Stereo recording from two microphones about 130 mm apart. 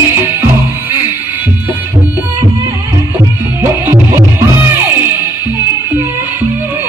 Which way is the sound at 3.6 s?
20° right (ahead or behind).